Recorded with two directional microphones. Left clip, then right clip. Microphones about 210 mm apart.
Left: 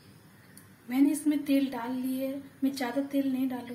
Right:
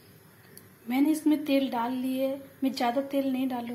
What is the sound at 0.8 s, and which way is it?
A woman's voice, 20° right (ahead or behind).